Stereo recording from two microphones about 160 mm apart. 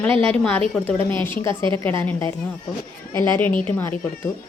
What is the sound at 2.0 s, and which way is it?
Speech, 15° left (ahead or behind).